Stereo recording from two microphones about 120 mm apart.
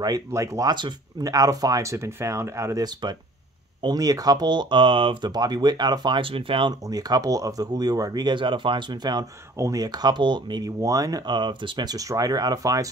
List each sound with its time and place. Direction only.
0.0 s speech: 30° right (ahead or behind); by 5.3 s 45° right (ahead or behind)
5.3 s speech: 35° right (ahead or behind)
6.9 s speech: 30° right (ahead or behind)